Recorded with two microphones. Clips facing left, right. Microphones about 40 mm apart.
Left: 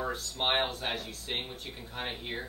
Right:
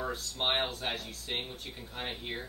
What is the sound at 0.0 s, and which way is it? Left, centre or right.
A man's voice, centre.